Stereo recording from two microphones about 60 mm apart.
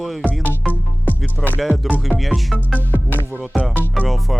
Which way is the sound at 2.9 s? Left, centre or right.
Left.